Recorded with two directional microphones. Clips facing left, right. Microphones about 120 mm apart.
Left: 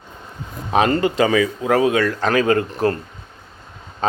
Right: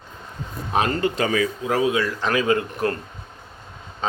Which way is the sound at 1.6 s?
60° left (ahead or behind).